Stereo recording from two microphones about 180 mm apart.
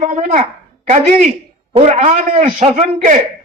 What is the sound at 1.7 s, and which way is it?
A man's voice, 35° right (ahead or behind).